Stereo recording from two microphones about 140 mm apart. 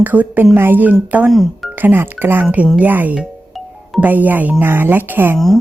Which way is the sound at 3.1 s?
Centre (ahead or behind).